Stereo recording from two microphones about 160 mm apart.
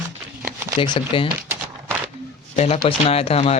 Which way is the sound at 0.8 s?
30° left (ahead or behind).